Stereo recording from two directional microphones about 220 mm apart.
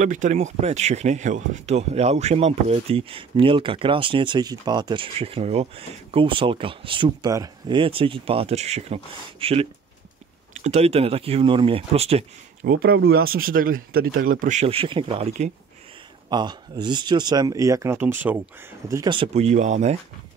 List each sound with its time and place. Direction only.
0.0 s speech: 35° right (ahead or behind)
12.6 s speech: 45° right (ahead or behind)